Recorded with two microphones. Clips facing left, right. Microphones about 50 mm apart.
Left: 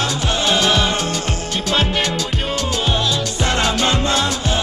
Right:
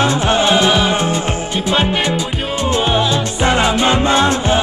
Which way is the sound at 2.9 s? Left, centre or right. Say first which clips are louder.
Right 4 dB; centre.